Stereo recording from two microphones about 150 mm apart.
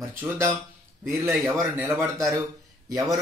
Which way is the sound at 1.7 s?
15° right (ahead or behind).